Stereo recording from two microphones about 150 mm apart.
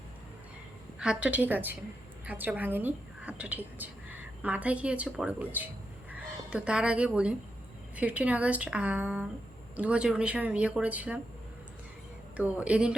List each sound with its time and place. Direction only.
0.9 s a woman's voice: 5° right (ahead or behind)
12.4 s speech: 10° right (ahead or behind)